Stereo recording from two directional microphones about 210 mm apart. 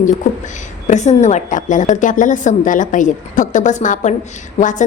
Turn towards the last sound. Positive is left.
turn(degrees=35)  # may be behind; listen again after turning